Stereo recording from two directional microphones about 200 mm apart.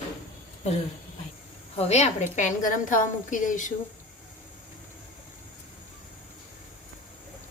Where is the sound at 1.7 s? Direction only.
35° left (ahead or behind).